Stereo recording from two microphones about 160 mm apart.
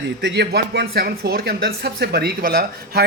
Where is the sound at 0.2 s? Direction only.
90° right.